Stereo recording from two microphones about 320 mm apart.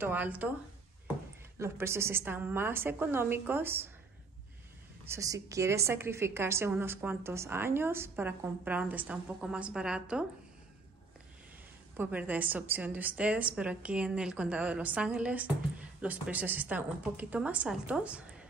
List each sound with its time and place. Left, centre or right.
0.0 s a woman's voice: centre
1.6 s a woman's voice: centre
5.0 s a woman's voice: centre
12.0 s a woman's voice: centre